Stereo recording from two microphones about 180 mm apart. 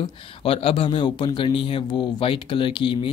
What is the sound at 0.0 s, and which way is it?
Speech, 30° left (ahead or behind).